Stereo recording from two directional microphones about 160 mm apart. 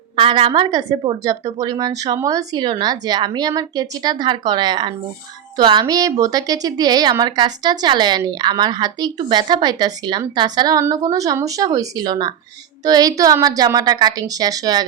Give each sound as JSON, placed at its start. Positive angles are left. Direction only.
{"t": 0.2, "sound": "speech", "side_deg": -35}